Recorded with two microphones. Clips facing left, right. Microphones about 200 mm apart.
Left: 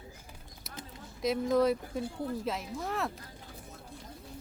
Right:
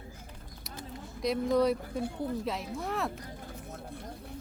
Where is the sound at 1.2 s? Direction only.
Centre (ahead or behind).